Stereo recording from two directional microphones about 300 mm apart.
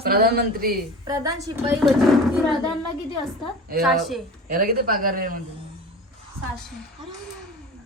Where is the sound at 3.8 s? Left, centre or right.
Centre.